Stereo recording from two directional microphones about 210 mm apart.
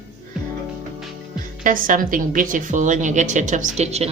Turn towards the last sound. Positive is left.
turn(degrees=-30)  # may be behind; listen again after turning